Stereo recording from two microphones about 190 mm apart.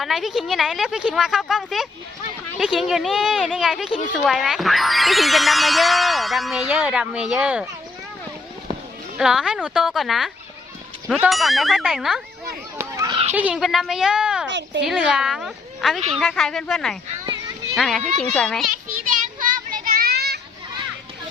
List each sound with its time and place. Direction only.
0.0 s speech: centre (ahead or behind)
9.1 s speech: 5° right (ahead or behind)
12.8 s children playing: 15° right (ahead or behind)
13.3 s speech: 5° right (ahead or behind)
14.5 s speech: 70° right (ahead or behind)
14.8 s speech: centre (ahead or behind)
19.0 s a sound: 45° right (ahead or behind)